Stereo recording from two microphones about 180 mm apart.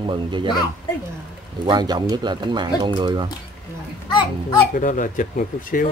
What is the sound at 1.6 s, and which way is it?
Speech, 25° right (ahead or behind).